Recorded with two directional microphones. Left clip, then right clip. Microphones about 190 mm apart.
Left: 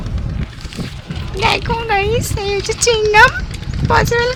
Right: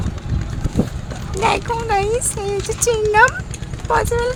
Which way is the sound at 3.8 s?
25° right (ahead or behind).